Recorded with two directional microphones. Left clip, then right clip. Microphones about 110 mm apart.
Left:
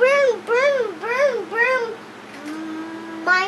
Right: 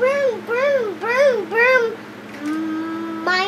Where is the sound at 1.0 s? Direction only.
10° right (ahead or behind).